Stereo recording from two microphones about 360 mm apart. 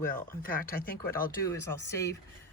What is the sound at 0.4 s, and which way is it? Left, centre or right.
Speech, left.